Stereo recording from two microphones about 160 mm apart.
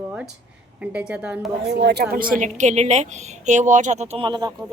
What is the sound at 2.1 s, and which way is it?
Speech, 60° right (ahead or behind).